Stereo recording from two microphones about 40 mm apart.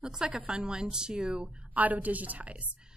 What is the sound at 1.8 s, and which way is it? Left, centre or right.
Speech, right.